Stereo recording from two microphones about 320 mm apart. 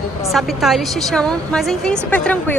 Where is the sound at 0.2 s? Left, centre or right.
Centre.